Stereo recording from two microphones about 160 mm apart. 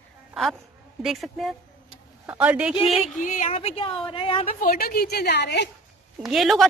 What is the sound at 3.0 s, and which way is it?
A woman's voice, 50° left (ahead or behind).